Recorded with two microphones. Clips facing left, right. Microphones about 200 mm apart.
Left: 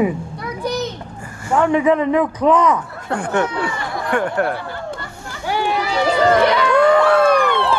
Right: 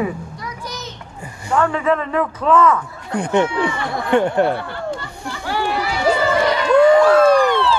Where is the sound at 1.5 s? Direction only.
15° left (ahead or behind).